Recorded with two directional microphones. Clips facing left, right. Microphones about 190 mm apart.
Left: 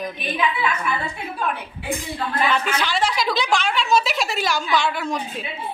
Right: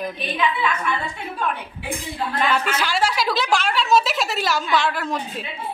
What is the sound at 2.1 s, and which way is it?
A woman's voice, 5° right (ahead or behind).